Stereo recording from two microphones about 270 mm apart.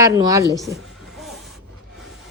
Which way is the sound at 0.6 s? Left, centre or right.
Centre.